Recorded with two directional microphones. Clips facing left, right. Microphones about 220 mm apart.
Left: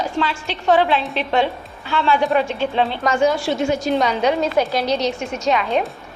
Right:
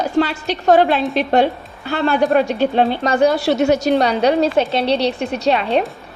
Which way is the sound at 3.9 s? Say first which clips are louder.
Right 3 dB; 35° right (ahead or behind).